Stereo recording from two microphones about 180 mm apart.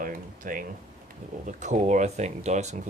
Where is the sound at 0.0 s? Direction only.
50° right (ahead or behind).